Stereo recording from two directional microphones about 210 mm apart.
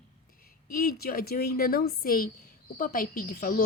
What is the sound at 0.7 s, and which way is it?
Speech, 45° left (ahead or behind).